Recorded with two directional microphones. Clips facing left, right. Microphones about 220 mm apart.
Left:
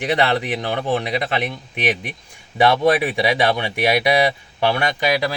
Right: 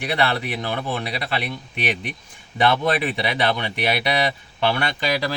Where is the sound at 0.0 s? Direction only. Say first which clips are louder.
Left 4 dB; 20° left (ahead or behind).